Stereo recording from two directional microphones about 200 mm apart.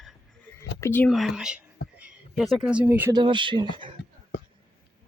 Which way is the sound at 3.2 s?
25° right (ahead or behind).